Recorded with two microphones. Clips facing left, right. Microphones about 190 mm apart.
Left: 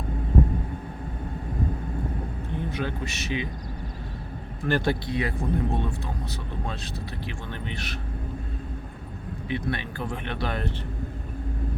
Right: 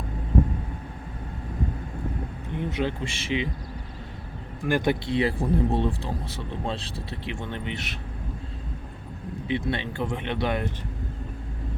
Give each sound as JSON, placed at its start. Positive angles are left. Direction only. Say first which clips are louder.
{"t": 2.6, "sound": "speech", "louder": "right 3 dB", "side_deg": -20}
{"t": 4.6, "sound": "speech", "louder": "right 1 dB", "side_deg": -15}
{"t": 9.5, "sound": "speech", "louder": "right 2 dB", "side_deg": -25}